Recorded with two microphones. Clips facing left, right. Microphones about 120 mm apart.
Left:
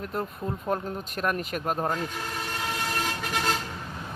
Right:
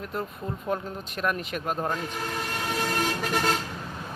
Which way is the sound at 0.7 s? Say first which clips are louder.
Even; 40° left (ahead or behind).